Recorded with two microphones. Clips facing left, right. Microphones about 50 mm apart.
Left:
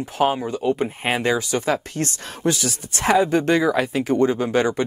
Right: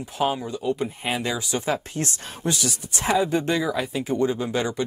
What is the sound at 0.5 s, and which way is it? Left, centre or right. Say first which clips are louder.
Speech: left 4 dB; left.